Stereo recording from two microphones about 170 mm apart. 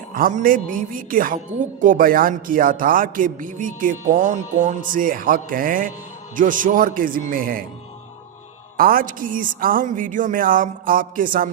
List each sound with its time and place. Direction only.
0.1 s a woman's voice: 55° right (ahead or behind)
8.8 s a woman's voice: 55° right (ahead or behind)